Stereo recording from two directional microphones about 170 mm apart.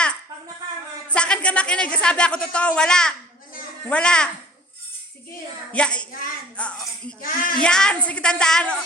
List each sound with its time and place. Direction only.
1.1 s speech: 5° left (ahead or behind)
5.7 s speech: 5° left (ahead or behind)
7.2 s speech: 55° left (ahead or behind)
7.6 s speech: 5° left (ahead or behind)